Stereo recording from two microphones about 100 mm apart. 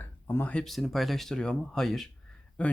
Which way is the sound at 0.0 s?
20° left (ahead or behind).